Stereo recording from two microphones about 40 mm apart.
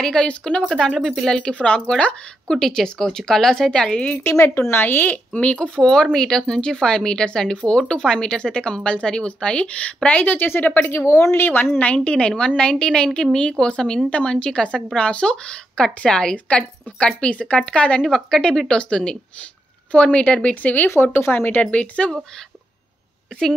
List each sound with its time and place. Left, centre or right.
0.0 s a woman's voice: centre
0.7 s speech: centre
1.5 s a woman's voice: left
2.4 s speech: centre
4.2 s speech: left
5.0 s speech: left
5.8 s a woman's voice: centre
10.2 s speech: left
10.9 s a woman's voice: left
11.8 s a woman's voice: left
18.0 s a woman's voice: centre
20.8 s a woman's voice: left
21.5 s speech: left